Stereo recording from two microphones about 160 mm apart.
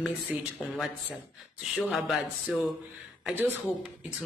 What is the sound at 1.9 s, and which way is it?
Speech, centre (ahead or behind).